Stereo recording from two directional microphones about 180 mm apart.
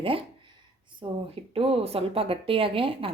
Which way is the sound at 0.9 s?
30° right (ahead or behind).